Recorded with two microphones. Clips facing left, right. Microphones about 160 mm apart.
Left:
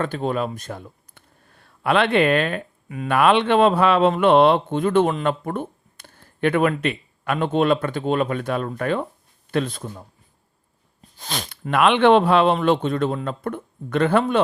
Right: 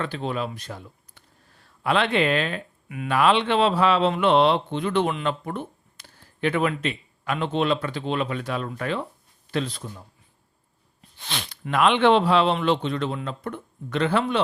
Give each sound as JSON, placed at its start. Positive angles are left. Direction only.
{"t": 0.0, "sound": "speech", "side_deg": 45}
{"t": 11.2, "sound": "speech", "side_deg": 40}
{"t": 11.7, "sound": "speech", "side_deg": 60}